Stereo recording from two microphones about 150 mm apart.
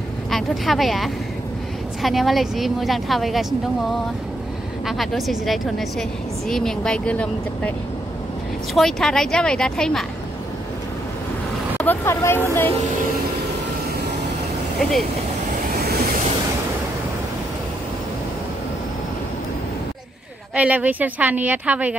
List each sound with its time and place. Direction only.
0.3 s a woman's voice: centre (ahead or behind)
4.8 s a woman's voice: centre (ahead or behind)
8.7 s a woman's voice: 5° left (ahead or behind)
11.8 s speech: 15° left (ahead or behind)
20.5 s a woman's voice: 10° right (ahead or behind)